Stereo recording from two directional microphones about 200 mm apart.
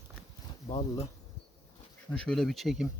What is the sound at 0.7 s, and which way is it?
Speech, 30° left (ahead or behind).